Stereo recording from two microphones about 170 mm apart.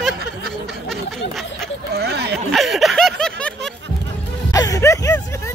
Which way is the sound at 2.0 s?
75° right (ahead or behind).